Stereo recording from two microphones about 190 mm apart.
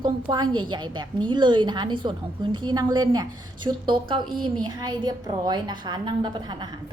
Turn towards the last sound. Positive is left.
turn(degrees=-25)  # may be behind; listen again after turning